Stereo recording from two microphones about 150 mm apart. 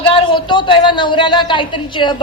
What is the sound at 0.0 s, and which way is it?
A woman's voice, 35° left (ahead or behind).